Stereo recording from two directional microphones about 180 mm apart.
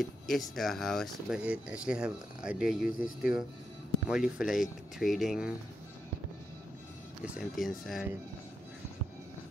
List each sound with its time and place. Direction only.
0.0 s speech: centre (ahead or behind)
7.2 s speech: centre (ahead or behind)